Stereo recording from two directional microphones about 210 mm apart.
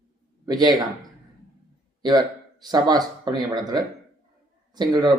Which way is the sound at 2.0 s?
20° right (ahead or behind).